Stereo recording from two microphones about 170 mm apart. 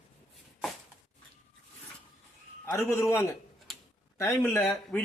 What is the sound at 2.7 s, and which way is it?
Speech, 15° left (ahead or behind).